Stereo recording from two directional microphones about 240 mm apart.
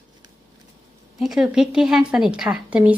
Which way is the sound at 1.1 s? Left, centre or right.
Centre.